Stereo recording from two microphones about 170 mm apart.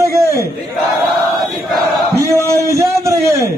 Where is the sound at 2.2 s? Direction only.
15° right (ahead or behind).